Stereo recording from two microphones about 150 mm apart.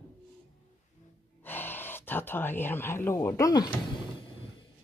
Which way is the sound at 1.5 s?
15° left (ahead or behind).